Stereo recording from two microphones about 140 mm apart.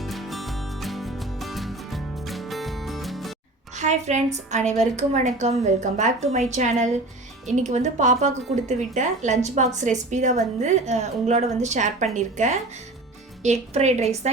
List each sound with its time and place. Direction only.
0.0 s music: centre (ahead or behind)
3.8 s a woman's voice: 55° right (ahead or behind)